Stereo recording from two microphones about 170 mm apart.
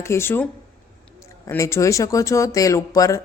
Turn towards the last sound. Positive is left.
turn(degrees=20)  # may be behind; listen again after turning